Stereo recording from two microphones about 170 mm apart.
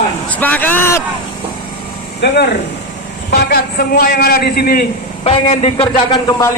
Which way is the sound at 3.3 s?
65° left (ahead or behind).